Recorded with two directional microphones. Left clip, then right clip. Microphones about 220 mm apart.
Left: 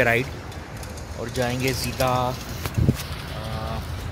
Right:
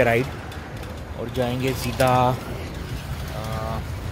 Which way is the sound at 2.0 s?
25° right (ahead or behind).